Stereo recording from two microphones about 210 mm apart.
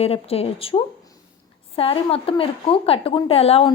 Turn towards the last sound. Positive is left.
turn(degrees=30)  # may be behind; listen again after turning